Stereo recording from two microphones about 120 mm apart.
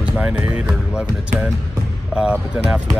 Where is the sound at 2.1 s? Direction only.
5° right (ahead or behind).